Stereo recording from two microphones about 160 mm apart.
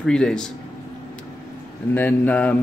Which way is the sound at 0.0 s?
5° left (ahead or behind).